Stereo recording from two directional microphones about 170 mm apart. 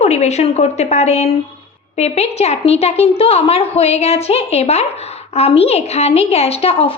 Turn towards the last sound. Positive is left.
turn(degrees=35)  # may be behind; listen again after turning